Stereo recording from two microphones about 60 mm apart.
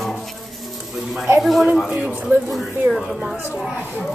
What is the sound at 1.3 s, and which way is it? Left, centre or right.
Speech, centre.